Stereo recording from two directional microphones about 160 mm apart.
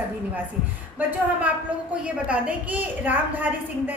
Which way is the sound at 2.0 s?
10° right (ahead or behind).